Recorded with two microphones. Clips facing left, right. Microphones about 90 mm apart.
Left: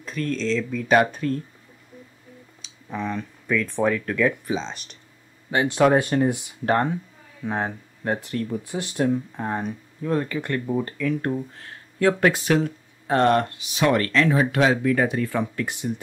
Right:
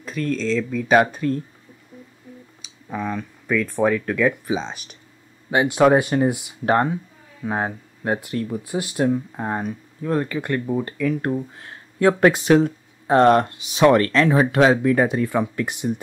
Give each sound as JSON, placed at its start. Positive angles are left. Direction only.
{"t": 0.0, "sound": "speech", "side_deg": -5}
{"t": 2.6, "sound": "speech", "side_deg": -5}
{"t": 11.6, "sound": "speech", "side_deg": -25}